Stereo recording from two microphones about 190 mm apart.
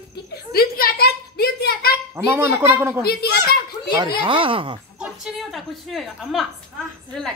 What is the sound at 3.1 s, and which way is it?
Speech, 55° left (ahead or behind).